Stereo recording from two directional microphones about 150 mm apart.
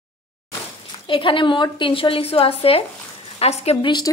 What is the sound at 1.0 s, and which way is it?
A woman's voice, 35° left (ahead or behind).